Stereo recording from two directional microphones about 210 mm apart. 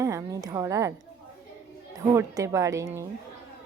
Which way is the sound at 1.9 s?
15° right (ahead or behind).